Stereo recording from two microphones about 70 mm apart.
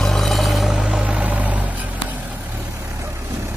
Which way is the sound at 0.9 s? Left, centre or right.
Centre.